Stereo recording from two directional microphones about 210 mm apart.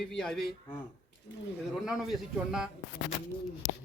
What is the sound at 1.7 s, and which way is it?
Speech, centre (ahead or behind).